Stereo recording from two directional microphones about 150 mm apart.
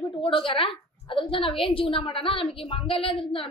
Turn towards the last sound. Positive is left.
turn(degrees=35)  # may be behind; listen again after turning